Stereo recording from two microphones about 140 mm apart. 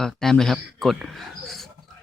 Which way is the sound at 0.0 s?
5° left (ahead or behind).